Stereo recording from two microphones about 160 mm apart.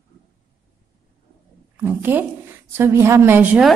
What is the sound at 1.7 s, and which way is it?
A woman's voice, 10° right (ahead or behind).